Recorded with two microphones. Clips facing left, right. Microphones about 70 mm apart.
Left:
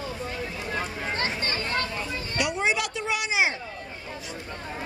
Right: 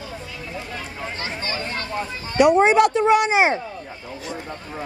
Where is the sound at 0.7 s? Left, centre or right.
Left.